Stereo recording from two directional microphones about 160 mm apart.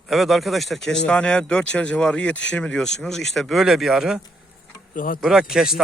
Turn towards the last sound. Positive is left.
turn(degrees=-5)  # may be behind; listen again after turning